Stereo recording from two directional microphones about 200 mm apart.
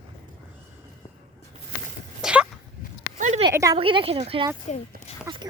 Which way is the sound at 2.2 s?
5° right (ahead or behind).